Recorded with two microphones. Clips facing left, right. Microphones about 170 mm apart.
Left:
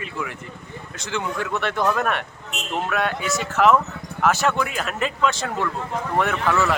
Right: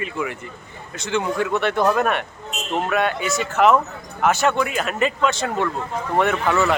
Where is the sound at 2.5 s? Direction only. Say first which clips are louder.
Right 1 dB; 65° left (ahead or behind).